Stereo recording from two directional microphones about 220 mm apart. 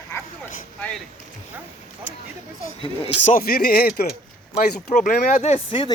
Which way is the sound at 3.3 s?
40° left (ahead or behind).